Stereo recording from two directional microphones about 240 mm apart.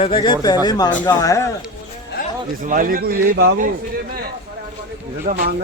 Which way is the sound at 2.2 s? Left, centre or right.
Left.